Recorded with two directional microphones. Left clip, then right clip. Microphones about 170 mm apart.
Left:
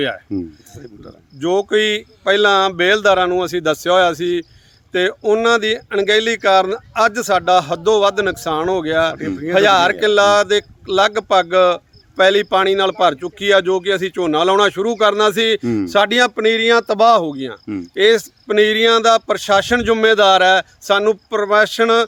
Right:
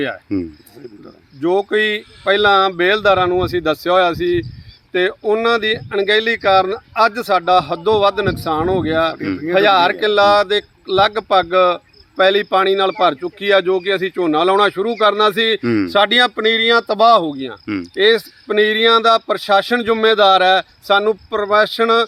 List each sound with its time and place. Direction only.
1.4 s speech: 40° left (ahead or behind)
15.6 s speech: 5° left (ahead or behind)
15.9 s speech: 35° left (ahead or behind)